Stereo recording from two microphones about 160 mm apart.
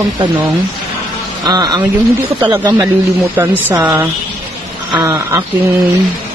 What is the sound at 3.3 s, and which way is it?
A man's voice, 10° right (ahead or behind).